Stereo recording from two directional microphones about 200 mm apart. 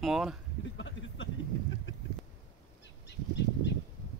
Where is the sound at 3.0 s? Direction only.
60° left (ahead or behind).